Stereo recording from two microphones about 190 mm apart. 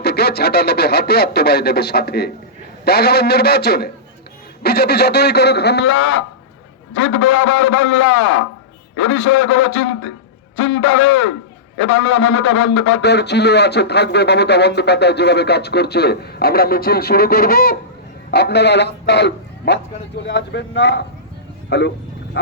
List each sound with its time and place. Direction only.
0.0 s a man's voice: 60° left (ahead or behind)